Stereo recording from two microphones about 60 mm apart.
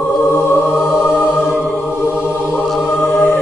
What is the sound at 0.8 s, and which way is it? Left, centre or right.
Music, centre.